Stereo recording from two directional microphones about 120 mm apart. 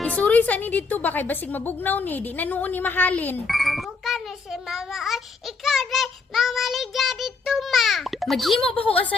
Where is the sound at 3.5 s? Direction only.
Centre (ahead or behind).